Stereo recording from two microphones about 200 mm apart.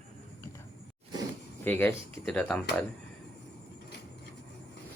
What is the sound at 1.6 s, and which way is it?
Speech, 10° left (ahead or behind).